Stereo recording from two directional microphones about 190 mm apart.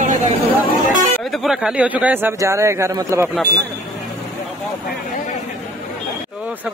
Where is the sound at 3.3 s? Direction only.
Centre (ahead or behind).